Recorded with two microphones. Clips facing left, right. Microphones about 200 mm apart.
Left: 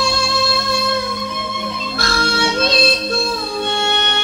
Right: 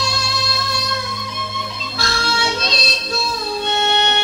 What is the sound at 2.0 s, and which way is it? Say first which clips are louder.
Music: left 3 dB; 55° left (ahead or behind).